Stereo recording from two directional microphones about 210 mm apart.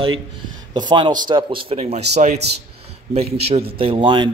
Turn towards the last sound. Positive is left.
turn(degrees=-20)  # may be behind; listen again after turning